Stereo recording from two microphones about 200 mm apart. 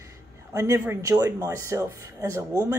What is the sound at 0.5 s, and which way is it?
Speech, 15° right (ahead or behind).